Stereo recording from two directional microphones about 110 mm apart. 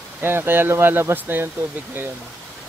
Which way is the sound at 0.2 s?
20° right (ahead or behind).